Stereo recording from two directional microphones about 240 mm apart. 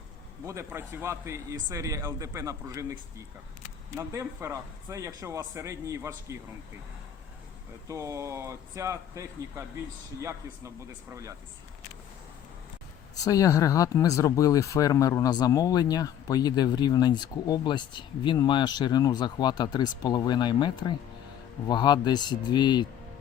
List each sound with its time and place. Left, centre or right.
0.4 s a man's voice: centre
7.9 s a man's voice: centre
11.1 s a man's voice: centre
13.2 s speech: centre